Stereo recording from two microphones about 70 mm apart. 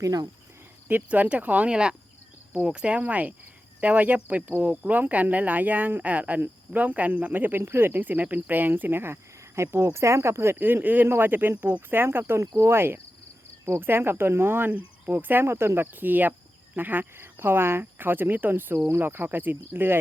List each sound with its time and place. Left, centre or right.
0.0 s speech: right
0.9 s speech: right
9.6 s speech: right